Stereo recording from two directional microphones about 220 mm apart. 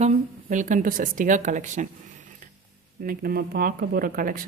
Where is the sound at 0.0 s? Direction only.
35° right (ahead or behind).